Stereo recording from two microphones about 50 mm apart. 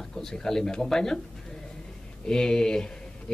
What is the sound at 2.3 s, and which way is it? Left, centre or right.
Speech, centre.